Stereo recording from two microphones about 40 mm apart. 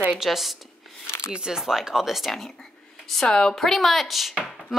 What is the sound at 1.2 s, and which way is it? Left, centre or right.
Speech, centre.